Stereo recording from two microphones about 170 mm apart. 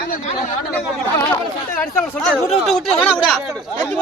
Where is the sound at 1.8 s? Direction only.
10° left (ahead or behind).